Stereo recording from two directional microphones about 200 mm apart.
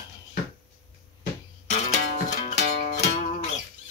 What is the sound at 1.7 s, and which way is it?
Music, 35° left (ahead or behind).